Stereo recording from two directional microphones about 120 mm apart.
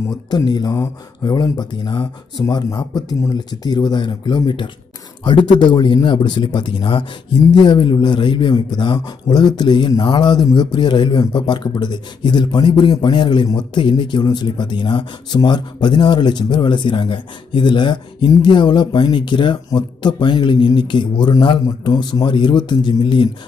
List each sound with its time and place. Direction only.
0.5 s a man's voice: 35° left (ahead or behind)